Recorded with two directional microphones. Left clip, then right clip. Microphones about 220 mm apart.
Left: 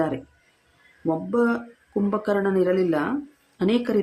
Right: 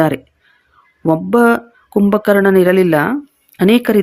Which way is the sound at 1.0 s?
40° right (ahead or behind).